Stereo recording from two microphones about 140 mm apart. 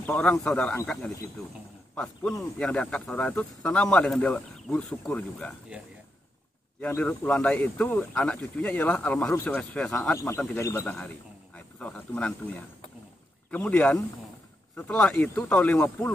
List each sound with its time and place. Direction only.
0.0 s speech: 10° left (ahead or behind)
2.0 s speech: 5° left (ahead or behind)
6.8 s speech: 10° left (ahead or behind)
10.1 s speech: 20° left (ahead or behind)
10.9 s speech: 10° left (ahead or behind)